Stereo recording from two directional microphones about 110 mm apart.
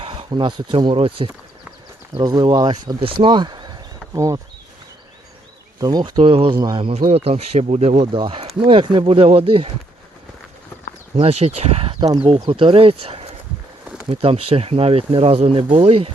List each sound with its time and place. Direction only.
0.0 s speech: 60° right (ahead or behind)
0.9 s speech: 60° right (ahead or behind)
2.1 s speech: 40° right (ahead or behind)
5.8 s speech: 40° right (ahead or behind); by 6.6 s 55° right (ahead or behind)
6.6 s speech: 45° right (ahead or behind)
6.8 s speech: 65° right (ahead or behind); by 8.0 s 85° right
8.1 s speech: 55° right (ahead or behind)
11.2 s speech: 70° right (ahead or behind)
11.9 s speech: 35° right (ahead or behind)
12.2 s speech: 55° right (ahead or behind)